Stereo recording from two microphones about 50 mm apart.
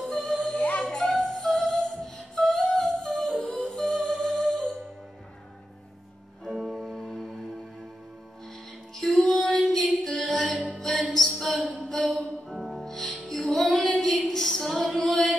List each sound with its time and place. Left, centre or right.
0.0 s music: centre
0.6 s music: left
0.8 s music: centre
6.4 s music: centre
8.9 s music: centre
11.1 s a sound: centre
12.0 s music: centre
13.7 s female singing: centre
14.2 s a sound: centre
15.0 s music: centre